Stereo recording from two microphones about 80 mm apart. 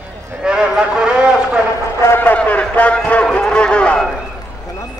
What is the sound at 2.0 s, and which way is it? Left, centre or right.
A man's voice, left.